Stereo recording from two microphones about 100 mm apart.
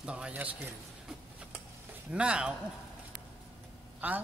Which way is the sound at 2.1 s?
10° right (ahead or behind).